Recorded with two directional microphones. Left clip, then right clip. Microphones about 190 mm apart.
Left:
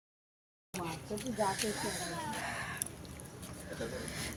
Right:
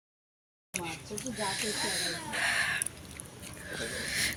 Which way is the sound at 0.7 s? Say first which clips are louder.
Right 2 dB; 25° left (ahead or behind).